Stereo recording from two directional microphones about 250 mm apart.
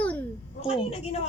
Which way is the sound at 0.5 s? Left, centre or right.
Left.